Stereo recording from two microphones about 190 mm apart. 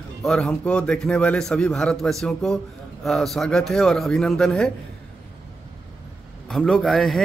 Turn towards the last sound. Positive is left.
turn(degrees=0)  # may be behind; listen again after turning